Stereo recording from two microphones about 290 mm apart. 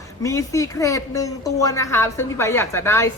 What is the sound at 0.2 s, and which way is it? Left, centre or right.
A woman's voice, centre.